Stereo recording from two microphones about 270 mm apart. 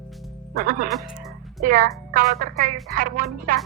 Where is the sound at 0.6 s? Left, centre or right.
Right.